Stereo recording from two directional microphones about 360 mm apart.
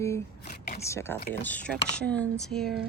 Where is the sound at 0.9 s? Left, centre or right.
Centre.